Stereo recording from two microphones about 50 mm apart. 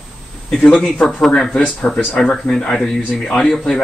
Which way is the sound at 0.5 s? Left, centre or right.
Centre.